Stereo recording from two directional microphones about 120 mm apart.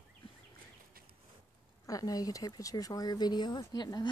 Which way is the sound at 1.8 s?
30° left (ahead or behind).